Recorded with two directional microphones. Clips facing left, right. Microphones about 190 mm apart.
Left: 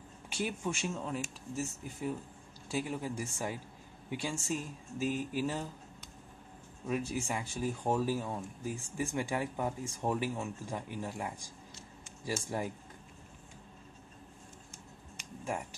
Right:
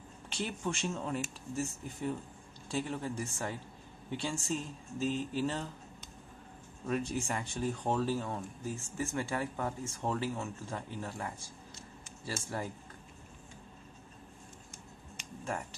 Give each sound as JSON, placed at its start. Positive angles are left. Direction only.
{"t": 0.3, "sound": "speech", "side_deg": 10}
{"t": 6.9, "sound": "speech", "side_deg": 5}